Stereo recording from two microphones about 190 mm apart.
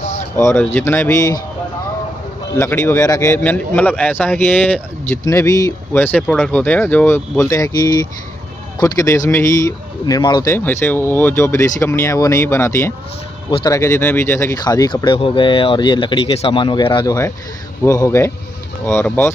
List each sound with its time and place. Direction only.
0.4 s speech: 15° left (ahead or behind)
2.5 s speech: 10° left (ahead or behind)